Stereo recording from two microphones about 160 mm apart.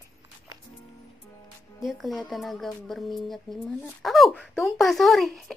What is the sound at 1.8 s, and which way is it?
Speech, centre (ahead or behind).